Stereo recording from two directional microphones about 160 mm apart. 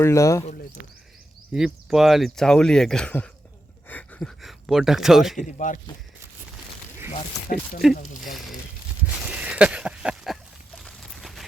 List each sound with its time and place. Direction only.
0.0 s speech: 20° left (ahead or behind)
1.5 s speech: 5° right (ahead or behind)
5.4 s speech: 50° left (ahead or behind)
7.8 s speech: centre (ahead or behind)
9.4 s a sound: 5° right (ahead or behind)